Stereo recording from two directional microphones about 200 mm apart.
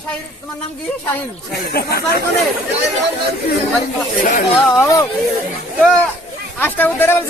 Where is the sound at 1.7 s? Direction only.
50° left (ahead or behind).